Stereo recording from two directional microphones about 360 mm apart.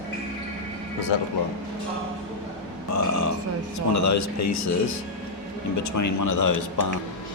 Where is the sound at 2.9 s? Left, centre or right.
Left.